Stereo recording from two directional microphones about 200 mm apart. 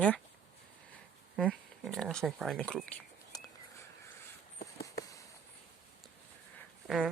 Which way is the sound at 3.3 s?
20° left (ahead or behind).